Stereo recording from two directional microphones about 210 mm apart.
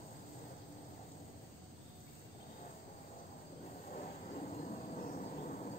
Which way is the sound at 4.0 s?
35° left (ahead or behind).